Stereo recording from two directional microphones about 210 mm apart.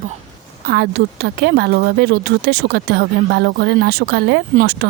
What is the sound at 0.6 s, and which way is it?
Speech, 45° right (ahead or behind).